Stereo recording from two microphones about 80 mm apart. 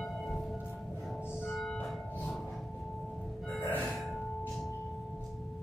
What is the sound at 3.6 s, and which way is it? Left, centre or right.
Music, left.